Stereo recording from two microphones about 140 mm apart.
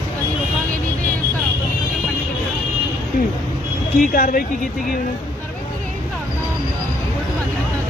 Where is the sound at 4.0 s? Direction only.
90° left.